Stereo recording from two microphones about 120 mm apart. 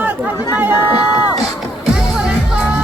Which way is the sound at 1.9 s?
5° right (ahead or behind).